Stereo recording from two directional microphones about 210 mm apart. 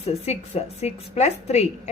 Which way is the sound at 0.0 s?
30° left (ahead or behind).